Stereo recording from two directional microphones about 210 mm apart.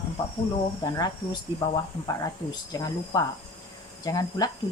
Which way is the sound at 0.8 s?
20° left (ahead or behind).